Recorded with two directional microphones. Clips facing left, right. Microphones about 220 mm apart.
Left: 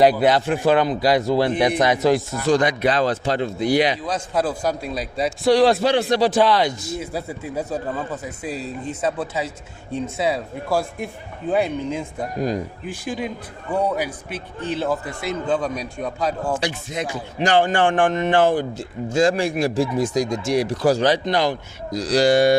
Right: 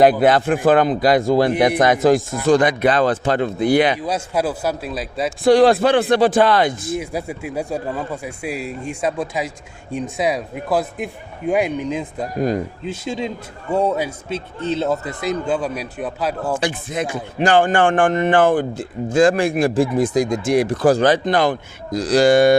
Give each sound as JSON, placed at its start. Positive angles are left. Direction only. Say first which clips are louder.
{"t": 0.0, "sound": "a man's voice", "louder": "right 3 dB", "side_deg": -50}
{"t": 4.0, "sound": "speech", "louder": "right 2 dB", "side_deg": -10}
{"t": 5.4, "sound": "a man's voice", "louder": "right 4 dB", "side_deg": -50}
{"t": 6.9, "sound": "a man's voice", "louder": "right 3 dB", "side_deg": -15}
{"t": 16.6, "sound": "a man's voice", "louder": "right 3 dB", "side_deg": -50}